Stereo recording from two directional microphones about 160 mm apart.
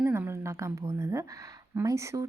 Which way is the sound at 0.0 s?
15° right (ahead or behind).